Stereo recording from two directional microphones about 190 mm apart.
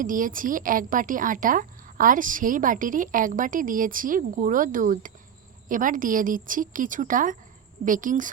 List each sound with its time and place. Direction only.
0.0 s a woman's voice: 45° right (ahead or behind)